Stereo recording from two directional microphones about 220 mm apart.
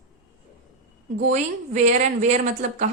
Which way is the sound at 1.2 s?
35° right (ahead or behind).